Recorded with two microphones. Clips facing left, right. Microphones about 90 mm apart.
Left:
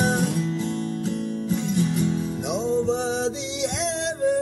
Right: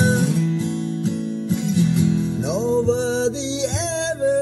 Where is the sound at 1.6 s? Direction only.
40° left (ahead or behind).